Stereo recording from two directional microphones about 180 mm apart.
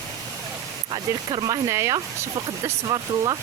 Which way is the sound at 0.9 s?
25° right (ahead or behind).